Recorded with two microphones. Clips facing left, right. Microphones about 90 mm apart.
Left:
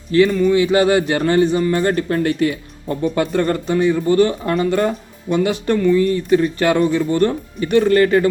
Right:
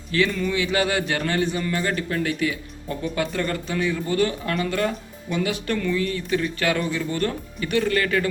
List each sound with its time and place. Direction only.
0.3 s speech: 10° left (ahead or behind)
0.5 s a man's voice: 30° left (ahead or behind)
5.5 s a man's voice: 20° left (ahead or behind)